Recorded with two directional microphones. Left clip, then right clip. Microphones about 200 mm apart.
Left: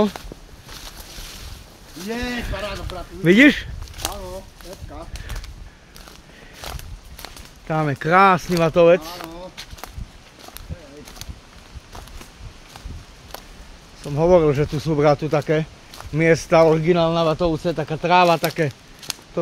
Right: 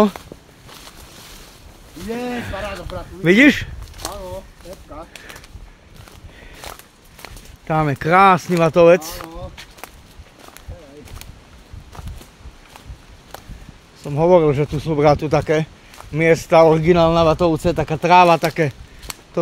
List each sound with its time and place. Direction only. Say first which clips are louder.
2.0 s speech: right 1 dB; centre (ahead or behind)
3.3 s speech: right 1 dB; 25° right (ahead or behind)
6.6 s walk: left 1 dB; centre (ahead or behind)
7.6 s speech: right 3 dB; 25° right (ahead or behind)
9.2 s a sound: right 1 dB; centre (ahead or behind)
14.0 s speech: right 2 dB; 20° right (ahead or behind)
15.0 s speech: right 3 dB; 25° right (ahead or behind)